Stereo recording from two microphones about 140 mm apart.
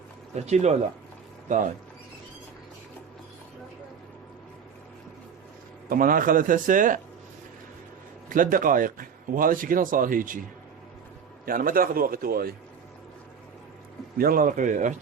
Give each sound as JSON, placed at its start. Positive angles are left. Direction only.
{"t": 0.4, "sound": "speech", "side_deg": -55}
{"t": 5.9, "sound": "a man's voice", "side_deg": -85}
{"t": 8.3, "sound": "speech", "side_deg": -75}
{"t": 11.4, "sound": "a man's voice", "side_deg": -90}
{"t": 14.2, "sound": "a man's voice", "side_deg": -90}